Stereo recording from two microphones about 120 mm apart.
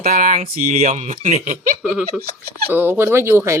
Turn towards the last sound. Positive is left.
turn(degrees=-20)  # may be behind; listen again after turning